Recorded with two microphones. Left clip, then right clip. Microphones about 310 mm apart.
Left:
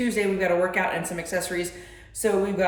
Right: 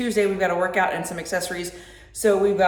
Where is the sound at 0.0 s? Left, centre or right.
Centre.